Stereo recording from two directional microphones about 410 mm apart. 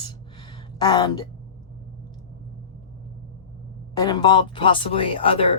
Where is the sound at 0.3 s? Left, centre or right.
Centre.